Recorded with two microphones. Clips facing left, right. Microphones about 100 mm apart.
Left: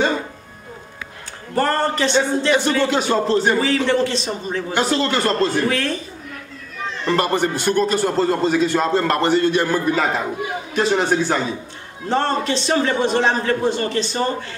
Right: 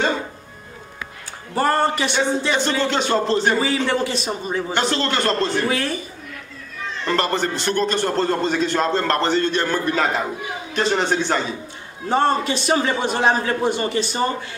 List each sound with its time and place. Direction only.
1.5 s a man's voice: 15° right (ahead or behind)
2.5 s speech: 5° left (ahead or behind)
3.6 s a man's voice: 10° right (ahead or behind)
4.7 s speech: 5° left (ahead or behind)
5.7 s a man's voice: 10° right (ahead or behind)
7.1 s a man's voice: 10° left (ahead or behind)
12.1 s a man's voice: 10° right (ahead or behind)